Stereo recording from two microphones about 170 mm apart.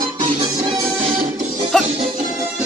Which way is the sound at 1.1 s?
45° right (ahead or behind).